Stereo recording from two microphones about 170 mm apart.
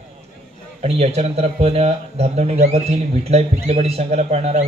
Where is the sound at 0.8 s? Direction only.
40° right (ahead or behind).